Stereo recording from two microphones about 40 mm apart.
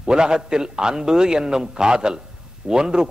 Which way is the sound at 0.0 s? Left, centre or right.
Centre.